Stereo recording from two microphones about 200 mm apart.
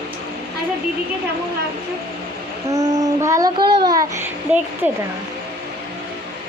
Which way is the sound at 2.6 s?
15° right (ahead or behind).